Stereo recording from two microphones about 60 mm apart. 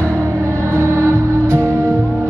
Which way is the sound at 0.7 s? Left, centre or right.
Right.